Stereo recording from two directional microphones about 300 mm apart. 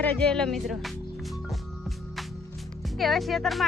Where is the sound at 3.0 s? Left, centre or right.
Centre.